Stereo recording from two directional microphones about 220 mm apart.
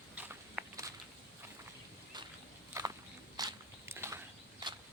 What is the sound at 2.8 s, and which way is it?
Walk, 15° right (ahead or behind).